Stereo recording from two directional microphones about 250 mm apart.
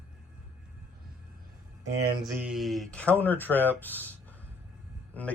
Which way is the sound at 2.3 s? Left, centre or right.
Centre.